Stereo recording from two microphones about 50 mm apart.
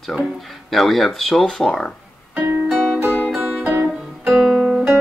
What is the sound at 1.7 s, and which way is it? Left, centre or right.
Speech, centre.